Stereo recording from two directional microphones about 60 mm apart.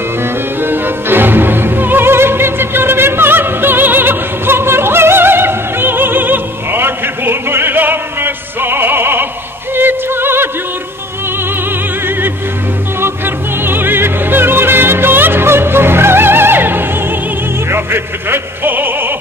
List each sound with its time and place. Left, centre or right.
0.6 s music: right
13.0 s music: right